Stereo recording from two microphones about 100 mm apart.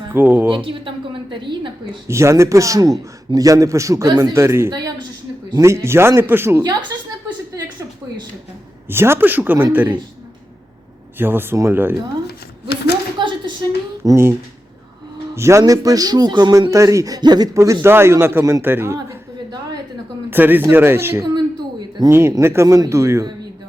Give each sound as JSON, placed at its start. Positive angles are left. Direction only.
{"t": 0.1, "sound": "speech", "side_deg": -20}
{"t": 0.5, "sound": "a woman's voice", "side_deg": -60}
{"t": 2.0, "sound": "a man's voice", "side_deg": -30}
{"t": 6.9, "sound": "a sound", "side_deg": -40}
{"t": 8.9, "sound": "a man's voice", "side_deg": -25}
{"t": 11.2, "sound": "speech", "side_deg": -20}
{"t": 13.1, "sound": "a sound", "side_deg": -55}
{"t": 14.0, "sound": "speech", "side_deg": -30}
{"t": 15.4, "sound": "a man's voice", "side_deg": -30}
{"t": 20.3, "sound": "speech", "side_deg": -20}
{"t": 21.2, "sound": "a sound", "side_deg": -45}
{"t": 22.3, "sound": "speech", "side_deg": -30}